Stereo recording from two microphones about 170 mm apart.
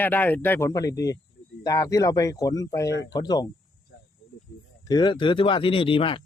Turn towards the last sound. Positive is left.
turn(degrees=30)  # may be behind; listen again after turning